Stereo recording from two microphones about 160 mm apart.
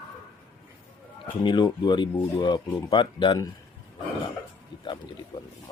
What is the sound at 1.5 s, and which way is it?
Speech, 25° left (ahead or behind).